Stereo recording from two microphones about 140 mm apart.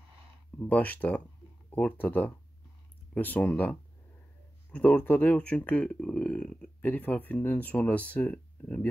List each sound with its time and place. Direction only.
0.6 s speech: 10° left (ahead or behind)